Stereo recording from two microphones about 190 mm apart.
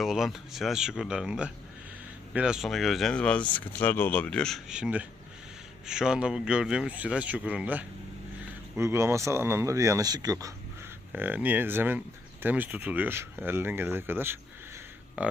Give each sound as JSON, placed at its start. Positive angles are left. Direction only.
{"t": 0.0, "sound": "speech", "side_deg": 0}